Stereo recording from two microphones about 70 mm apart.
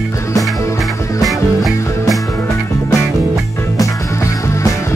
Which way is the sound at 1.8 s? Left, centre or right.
Left.